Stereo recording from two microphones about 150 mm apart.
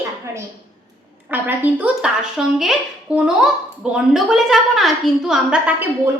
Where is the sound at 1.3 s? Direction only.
10° right (ahead or behind).